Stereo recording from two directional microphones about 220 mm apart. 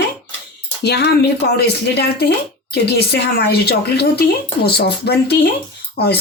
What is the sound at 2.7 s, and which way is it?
Speech, 50° left (ahead or behind).